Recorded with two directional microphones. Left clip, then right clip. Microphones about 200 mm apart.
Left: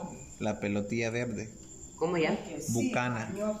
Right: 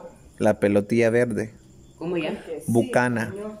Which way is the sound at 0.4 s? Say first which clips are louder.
Right 13 dB; 35° right (ahead or behind).